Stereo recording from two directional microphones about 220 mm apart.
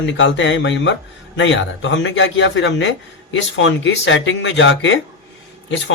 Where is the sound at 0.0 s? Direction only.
55° left (ahead or behind).